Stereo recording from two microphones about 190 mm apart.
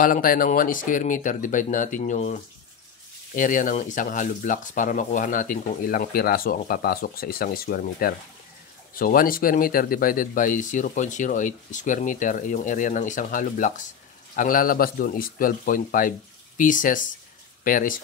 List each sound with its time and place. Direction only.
0.0 s speech: 45° left (ahead or behind)